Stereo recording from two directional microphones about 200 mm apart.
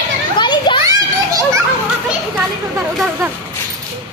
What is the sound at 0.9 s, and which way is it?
Children playing, 15° right (ahead or behind).